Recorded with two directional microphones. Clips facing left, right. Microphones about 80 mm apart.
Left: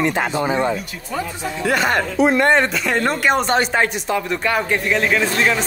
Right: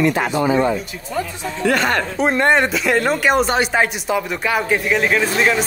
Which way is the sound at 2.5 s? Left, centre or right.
Centre.